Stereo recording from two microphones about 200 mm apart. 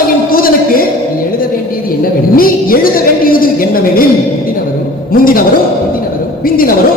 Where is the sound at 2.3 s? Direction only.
45° left (ahead or behind).